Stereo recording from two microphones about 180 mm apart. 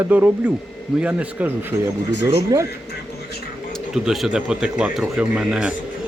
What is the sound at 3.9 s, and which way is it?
Speech, 5° right (ahead or behind).